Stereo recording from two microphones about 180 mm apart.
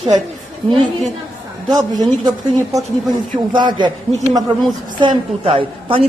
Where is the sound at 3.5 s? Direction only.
25° right (ahead or behind).